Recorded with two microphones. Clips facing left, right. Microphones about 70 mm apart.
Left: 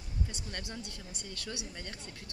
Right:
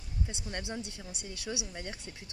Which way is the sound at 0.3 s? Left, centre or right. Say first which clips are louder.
Right 4 dB; right.